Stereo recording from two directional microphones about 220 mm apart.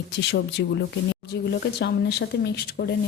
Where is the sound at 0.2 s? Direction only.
50° left (ahead or behind).